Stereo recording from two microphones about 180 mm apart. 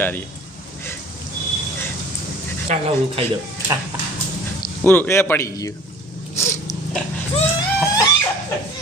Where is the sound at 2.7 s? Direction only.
40° right (ahead or behind).